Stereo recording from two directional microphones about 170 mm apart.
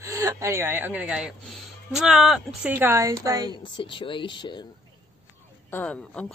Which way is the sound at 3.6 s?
30° left (ahead or behind).